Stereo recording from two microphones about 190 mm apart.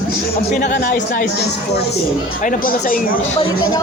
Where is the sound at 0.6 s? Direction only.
50° left (ahead or behind).